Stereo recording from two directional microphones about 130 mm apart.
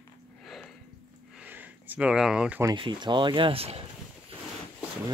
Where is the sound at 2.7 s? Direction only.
35° right (ahead or behind).